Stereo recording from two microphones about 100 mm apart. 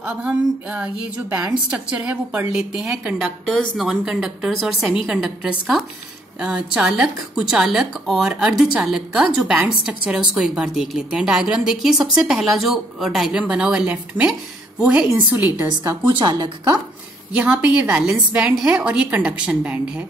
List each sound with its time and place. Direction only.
0.0 s a woman's voice: 10° right (ahead or behind)
15.8 s a woman's voice: 25° right (ahead or behind)
16.2 s speech: 45° right (ahead or behind)
17.4 s a woman's voice: 10° right (ahead or behind)